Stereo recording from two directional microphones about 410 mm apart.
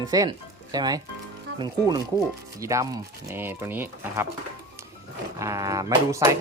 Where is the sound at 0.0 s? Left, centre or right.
Centre.